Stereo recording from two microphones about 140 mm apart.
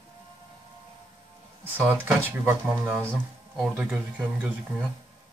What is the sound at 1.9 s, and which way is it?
Speech, 15° right (ahead or behind).